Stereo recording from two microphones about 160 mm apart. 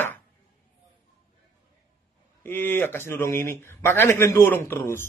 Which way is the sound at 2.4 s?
15° left (ahead or behind).